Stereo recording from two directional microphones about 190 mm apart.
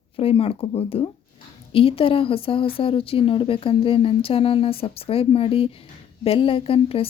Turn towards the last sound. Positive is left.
turn(degrees=30)  # may be behind; listen again after turning